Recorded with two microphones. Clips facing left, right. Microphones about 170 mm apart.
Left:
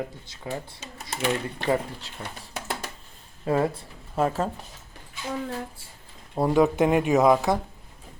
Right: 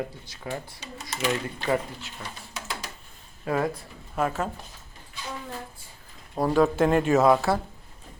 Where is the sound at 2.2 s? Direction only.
55° left (ahead or behind).